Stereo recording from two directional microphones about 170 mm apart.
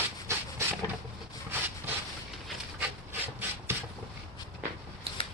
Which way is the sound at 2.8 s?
10° right (ahead or behind).